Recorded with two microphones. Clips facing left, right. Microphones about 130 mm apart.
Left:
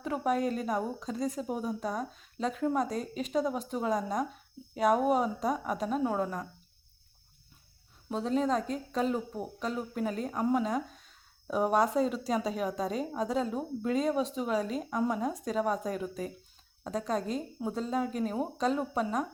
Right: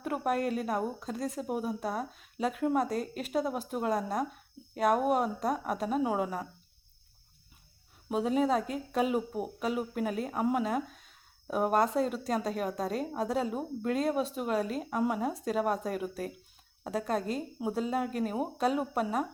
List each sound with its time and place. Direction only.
0.0 s speech: 5° right (ahead or behind)
8.1 s speech: 10° right (ahead or behind)